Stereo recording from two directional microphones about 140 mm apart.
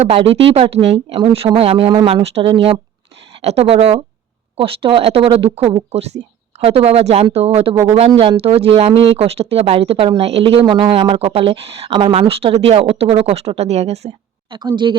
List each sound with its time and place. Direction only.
0.0 s a woman's voice: 45° right (ahead or behind)
10.6 s speech: 30° right (ahead or behind)
10.9 s speech: 40° right (ahead or behind)
14.5 s speech: 30° right (ahead or behind)